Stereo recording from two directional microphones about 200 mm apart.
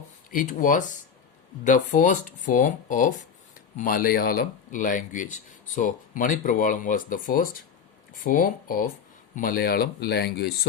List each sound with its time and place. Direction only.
0.3 s speech: 40° left (ahead or behind)